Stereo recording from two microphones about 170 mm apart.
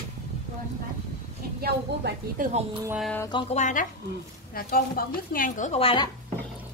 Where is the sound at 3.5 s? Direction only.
45° left (ahead or behind).